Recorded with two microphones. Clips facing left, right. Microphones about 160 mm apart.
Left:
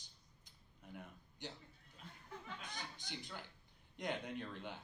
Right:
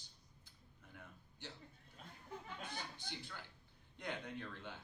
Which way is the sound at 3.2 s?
15° left (ahead or behind).